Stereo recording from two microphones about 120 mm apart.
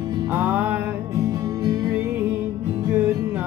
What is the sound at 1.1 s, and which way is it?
Music, 30° right (ahead or behind).